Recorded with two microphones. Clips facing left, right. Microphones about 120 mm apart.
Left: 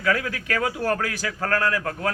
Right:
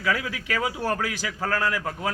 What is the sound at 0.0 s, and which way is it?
A man's voice, 15° right (ahead or behind).